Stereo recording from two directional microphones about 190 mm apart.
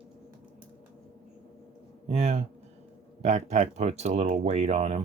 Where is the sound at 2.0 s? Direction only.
35° right (ahead or behind).